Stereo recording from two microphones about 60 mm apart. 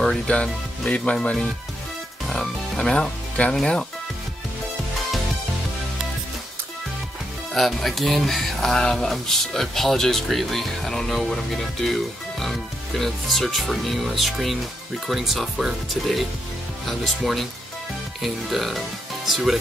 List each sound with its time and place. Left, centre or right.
0.0 s speech: centre
7.5 s speech: centre